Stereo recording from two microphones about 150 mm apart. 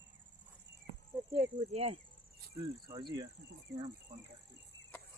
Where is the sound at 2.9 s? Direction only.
25° right (ahead or behind).